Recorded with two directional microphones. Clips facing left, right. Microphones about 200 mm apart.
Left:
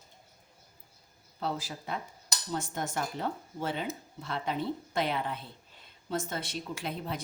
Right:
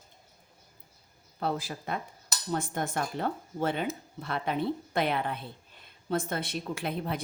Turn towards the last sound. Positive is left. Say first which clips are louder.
# right 4 dB
turn(degrees=-60)  # may be behind; listen again after turning